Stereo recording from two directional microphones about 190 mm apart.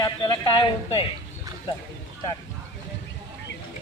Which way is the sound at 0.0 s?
25° left (ahead or behind).